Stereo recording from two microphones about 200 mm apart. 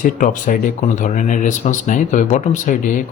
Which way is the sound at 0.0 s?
40° left (ahead or behind).